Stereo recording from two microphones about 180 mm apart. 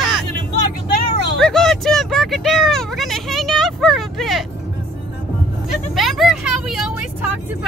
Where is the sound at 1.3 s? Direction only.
5° left (ahead or behind).